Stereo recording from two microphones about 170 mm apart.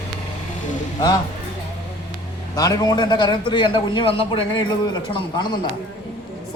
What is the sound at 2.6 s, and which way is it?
A man's voice, 20° left (ahead or behind).